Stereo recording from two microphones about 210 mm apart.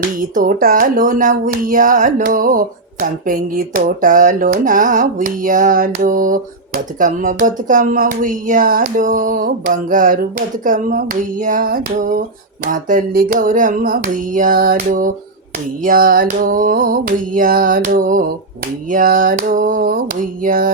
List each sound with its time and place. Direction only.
0.2 s speech: 40° right (ahead or behind)